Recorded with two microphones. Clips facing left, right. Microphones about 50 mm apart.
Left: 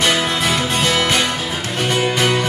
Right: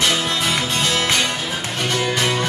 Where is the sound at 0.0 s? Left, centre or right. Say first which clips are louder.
Left 3 dB; centre.